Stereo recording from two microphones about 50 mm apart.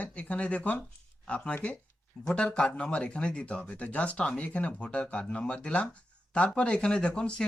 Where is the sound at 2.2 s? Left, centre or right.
Centre.